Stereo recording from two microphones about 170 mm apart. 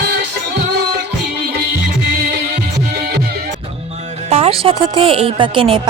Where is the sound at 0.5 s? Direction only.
65° right (ahead or behind).